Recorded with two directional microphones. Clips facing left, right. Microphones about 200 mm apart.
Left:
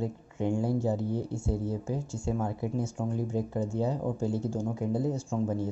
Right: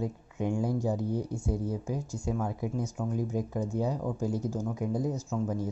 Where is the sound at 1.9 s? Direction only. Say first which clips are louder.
Left 1 dB; 25° left (ahead or behind).